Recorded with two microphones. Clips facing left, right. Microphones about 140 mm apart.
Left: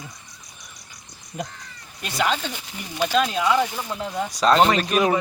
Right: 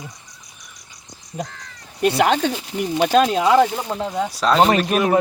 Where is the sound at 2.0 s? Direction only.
60° right (ahead or behind).